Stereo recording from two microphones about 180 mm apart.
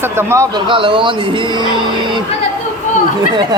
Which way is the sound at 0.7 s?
30° right (ahead or behind).